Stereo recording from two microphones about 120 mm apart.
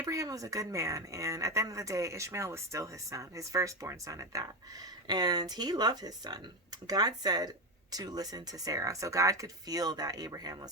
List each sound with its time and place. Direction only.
0.0 s speech: 30° right (ahead or behind)